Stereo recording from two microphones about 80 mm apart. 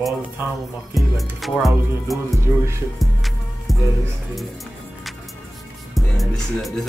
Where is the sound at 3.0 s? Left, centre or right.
Centre.